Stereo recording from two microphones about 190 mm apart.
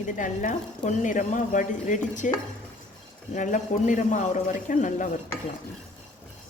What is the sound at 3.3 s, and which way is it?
A man's voice, 40° left (ahead or behind).